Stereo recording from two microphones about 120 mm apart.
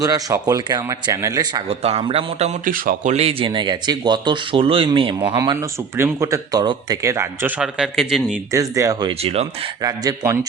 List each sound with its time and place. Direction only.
0.0 s speech: 30° right (ahead or behind)
1.6 s a man's voice: 55° right (ahead or behind)
5.3 s speech: 35° right (ahead or behind)
5.5 s speech: 25° right (ahead or behind)
7.6 s a man's voice: 5° right (ahead or behind)
8.5 s speech: 25° right (ahead or behind)
9.0 s speech: 55° right (ahead or behind)
9.8 s speech: 30° right (ahead or behind)